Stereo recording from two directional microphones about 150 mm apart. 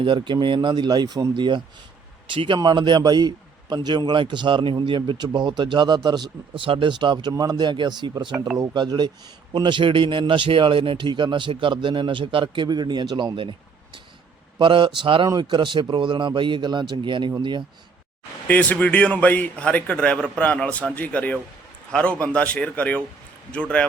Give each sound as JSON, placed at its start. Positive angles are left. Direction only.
{"t": 0.0, "sound": "a man's voice", "side_deg": -30}
{"t": 18.4, "sound": "a man's voice", "side_deg": 10}